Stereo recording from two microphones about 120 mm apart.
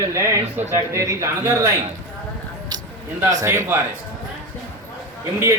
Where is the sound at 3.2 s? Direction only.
25° right (ahead or behind).